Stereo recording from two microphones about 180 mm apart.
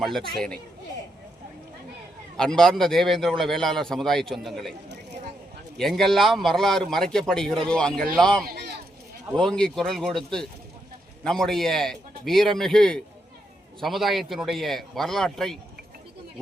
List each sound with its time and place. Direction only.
0.0 s a man's voice: centre (ahead or behind)
2.4 s a man's voice: 5° left (ahead or behind)
5.7 s a man's voice: centre (ahead or behind)
8.4 s a sound: 65° right (ahead or behind)
9.3 s a man's voice: 5° left (ahead or behind)